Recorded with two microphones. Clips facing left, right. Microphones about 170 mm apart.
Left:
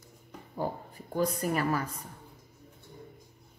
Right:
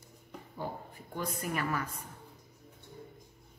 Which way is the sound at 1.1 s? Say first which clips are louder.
Left 7 dB; 40° left (ahead or behind).